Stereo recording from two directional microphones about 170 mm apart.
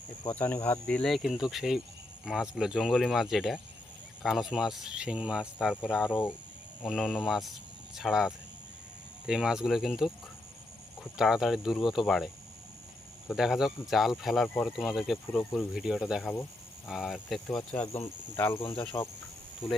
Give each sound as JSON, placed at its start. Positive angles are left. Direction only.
{"t": 0.3, "sound": "speech", "side_deg": 10}
{"t": 6.1, "sound": "speech", "side_deg": 10}
{"t": 16.3, "sound": "a sound", "side_deg": 10}
{"t": 16.9, "sound": "speech", "side_deg": 0}
{"t": 18.3, "sound": "speech", "side_deg": 15}
{"t": 18.6, "sound": "speech", "side_deg": 30}